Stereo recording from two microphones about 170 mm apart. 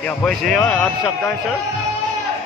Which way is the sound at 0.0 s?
5° left (ahead or behind).